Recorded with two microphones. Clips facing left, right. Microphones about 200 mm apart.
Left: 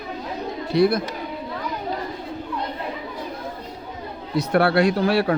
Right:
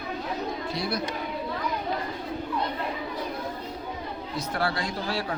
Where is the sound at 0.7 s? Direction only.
55° left (ahead or behind).